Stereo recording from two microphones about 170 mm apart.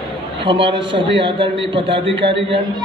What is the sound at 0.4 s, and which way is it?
A man's voice, 30° right (ahead or behind).